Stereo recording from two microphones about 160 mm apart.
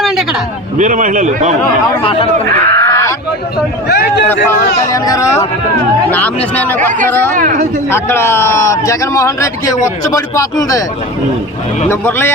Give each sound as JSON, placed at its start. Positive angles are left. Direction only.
{"t": 0.8, "sound": "a man's voice", "side_deg": -50}
{"t": 1.6, "sound": "speech", "side_deg": 35}
{"t": 2.6, "sound": "a sound", "side_deg": 20}
{"t": 3.8, "sound": "a man's voice", "side_deg": 85}
{"t": 4.9, "sound": "a man's voice", "side_deg": 20}
{"t": 7.3, "sound": "speech", "side_deg": -55}
{"t": 7.9, "sound": "a man's voice", "side_deg": 15}
{"t": 11.9, "sound": "a man's voice", "side_deg": 15}